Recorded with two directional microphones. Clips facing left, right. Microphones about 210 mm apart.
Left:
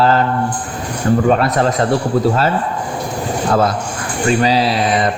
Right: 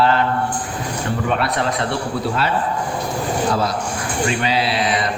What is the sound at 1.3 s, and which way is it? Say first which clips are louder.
Speech: left 6 dB; 40° left (ahead or behind).